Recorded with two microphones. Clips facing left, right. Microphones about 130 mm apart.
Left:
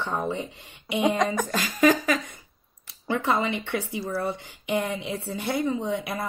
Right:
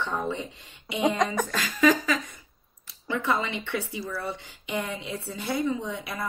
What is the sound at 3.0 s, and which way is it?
Speech, 50° left (ahead or behind).